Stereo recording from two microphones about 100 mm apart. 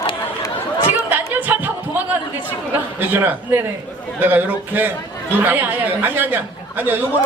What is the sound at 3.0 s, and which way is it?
A man's voice, 20° right (ahead or behind).